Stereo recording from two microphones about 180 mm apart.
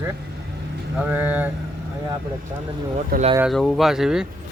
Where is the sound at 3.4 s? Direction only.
Centre (ahead or behind).